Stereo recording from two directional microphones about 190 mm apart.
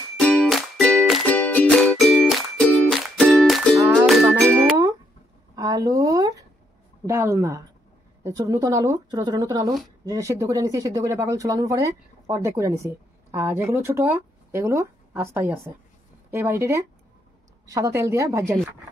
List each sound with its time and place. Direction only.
0.2 s music: 5° left (ahead or behind)
4.6 s music: 15° right (ahead or behind)
5.6 s a sound: 15° right (ahead or behind)
7.1 s speech: 15° right (ahead or behind)